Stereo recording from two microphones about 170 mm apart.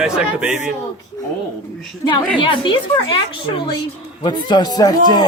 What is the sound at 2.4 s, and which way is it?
A woman's voice, 30° left (ahead or behind).